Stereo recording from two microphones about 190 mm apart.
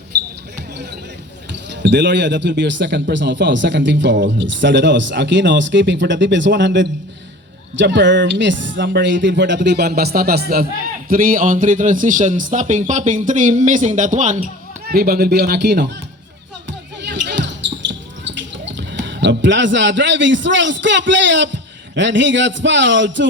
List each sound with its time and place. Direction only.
1.7 s a man's voice: 65° right (ahead or behind); by 14.3 s 40° right (ahead or behind)
14.8 s speech: 55° right (ahead or behind)
17.0 s basketball bounce: 65° right (ahead or behind)
18.7 s a man's voice: 70° right (ahead or behind)